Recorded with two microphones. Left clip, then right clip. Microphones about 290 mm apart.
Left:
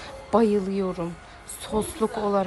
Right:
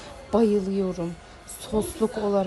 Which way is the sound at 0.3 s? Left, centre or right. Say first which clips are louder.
Left 1 dB; centre.